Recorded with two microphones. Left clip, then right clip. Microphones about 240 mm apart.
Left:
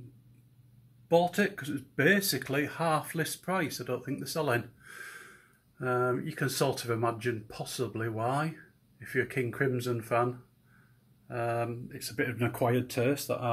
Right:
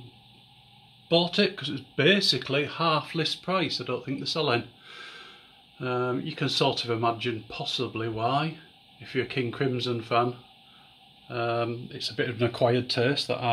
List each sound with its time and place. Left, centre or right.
2.0 s speech: centre
5.8 s speech: centre
11.2 s speech: centre